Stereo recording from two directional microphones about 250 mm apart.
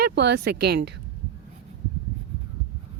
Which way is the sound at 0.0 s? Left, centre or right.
Right.